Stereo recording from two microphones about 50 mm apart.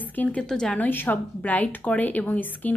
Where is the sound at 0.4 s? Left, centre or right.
Centre.